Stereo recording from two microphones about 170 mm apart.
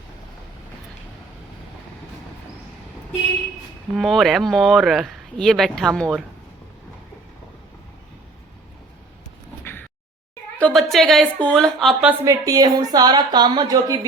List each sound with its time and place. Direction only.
3.9 s speech: centre (ahead or behind)
10.6 s a woman's voice: centre (ahead or behind)
12.2 s a woman's voice: 20° right (ahead or behind)